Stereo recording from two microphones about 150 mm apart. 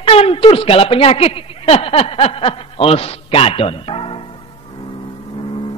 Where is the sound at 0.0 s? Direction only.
40° left (ahead or behind).